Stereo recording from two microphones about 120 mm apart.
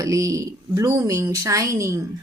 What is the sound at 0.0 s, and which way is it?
A woman's voice, 25° right (ahead or behind).